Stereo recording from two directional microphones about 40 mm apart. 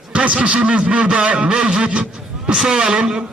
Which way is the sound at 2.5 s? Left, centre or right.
Centre.